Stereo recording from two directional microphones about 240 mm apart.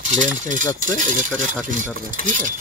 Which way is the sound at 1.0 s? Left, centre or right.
Right.